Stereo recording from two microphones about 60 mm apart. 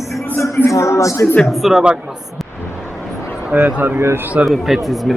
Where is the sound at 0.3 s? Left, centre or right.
Left.